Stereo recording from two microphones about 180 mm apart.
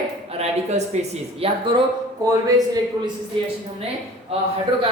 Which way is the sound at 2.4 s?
20° right (ahead or behind).